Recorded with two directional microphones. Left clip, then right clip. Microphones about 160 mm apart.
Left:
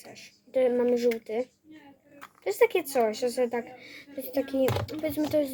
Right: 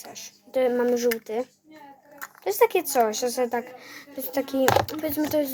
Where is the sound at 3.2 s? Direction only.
50° right (ahead or behind).